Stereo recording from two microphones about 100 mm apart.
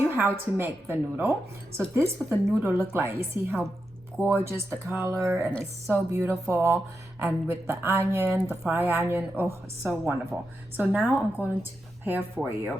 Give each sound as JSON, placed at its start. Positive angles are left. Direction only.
{"t": 0.1, "sound": "a woman's voice", "side_deg": -20}
{"t": 2.5, "sound": "a woman's voice", "side_deg": -25}